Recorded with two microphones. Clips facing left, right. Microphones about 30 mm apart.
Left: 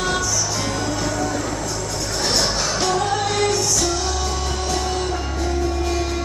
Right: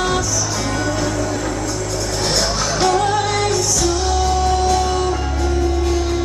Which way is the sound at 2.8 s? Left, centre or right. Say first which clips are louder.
Right 5 dB; right.